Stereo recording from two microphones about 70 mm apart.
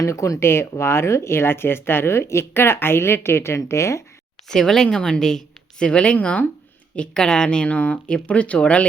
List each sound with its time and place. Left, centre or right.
0.0 s speech: left
4.4 s speech: centre